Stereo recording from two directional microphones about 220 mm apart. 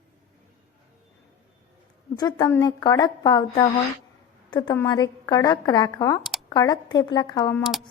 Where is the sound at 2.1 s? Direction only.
20° left (ahead or behind).